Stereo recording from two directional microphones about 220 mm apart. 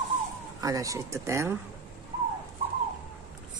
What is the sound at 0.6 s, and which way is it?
Speech, 15° right (ahead or behind).